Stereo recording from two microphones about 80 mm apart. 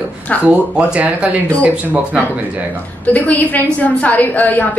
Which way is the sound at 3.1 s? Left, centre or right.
Left.